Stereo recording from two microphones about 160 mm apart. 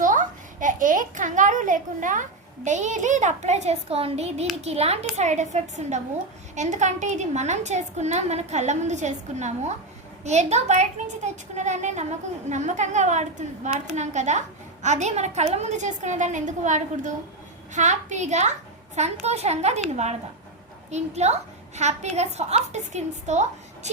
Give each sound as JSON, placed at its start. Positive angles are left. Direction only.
{"t": 0.0, "sound": "a child's voice", "side_deg": -55}
{"t": 20.9, "sound": "a woman's voice", "side_deg": -45}